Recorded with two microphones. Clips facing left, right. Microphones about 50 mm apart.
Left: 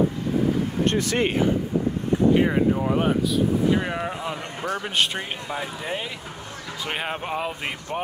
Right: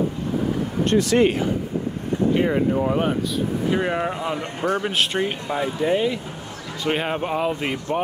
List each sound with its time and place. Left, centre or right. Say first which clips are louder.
0.8 s speech: right 7 dB; left
2.3 s speech: even; centre
4.4 s a man's voice: right 5 dB; right
4.8 s speech: right 3 dB; centre